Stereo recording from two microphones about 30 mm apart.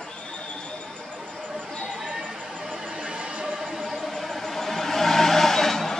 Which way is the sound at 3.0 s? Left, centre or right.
Right.